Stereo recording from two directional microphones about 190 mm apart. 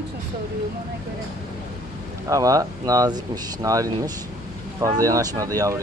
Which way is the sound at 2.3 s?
20° right (ahead or behind).